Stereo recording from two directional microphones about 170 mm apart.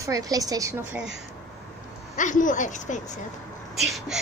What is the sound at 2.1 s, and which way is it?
Speech, 50° left (ahead or behind).